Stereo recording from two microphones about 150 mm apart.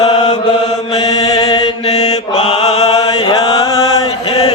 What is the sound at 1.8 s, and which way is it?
Mantra, 45° left (ahead or behind).